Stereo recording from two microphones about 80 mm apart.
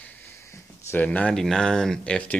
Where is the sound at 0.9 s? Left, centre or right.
Left.